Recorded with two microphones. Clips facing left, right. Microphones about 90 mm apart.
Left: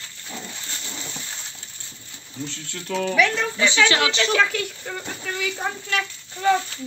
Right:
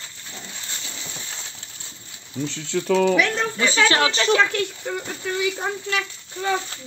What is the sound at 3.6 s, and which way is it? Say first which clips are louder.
Speech: even; 40° right (ahead or behind).